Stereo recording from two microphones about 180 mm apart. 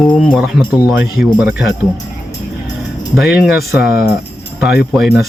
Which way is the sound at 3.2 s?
Centre (ahead or behind).